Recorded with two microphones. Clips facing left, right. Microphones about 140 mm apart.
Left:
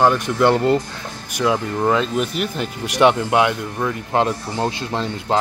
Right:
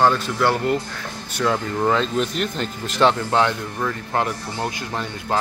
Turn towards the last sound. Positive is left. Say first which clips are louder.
# left 4 dB
turn(degrees=25)  # may be behind; listen again after turning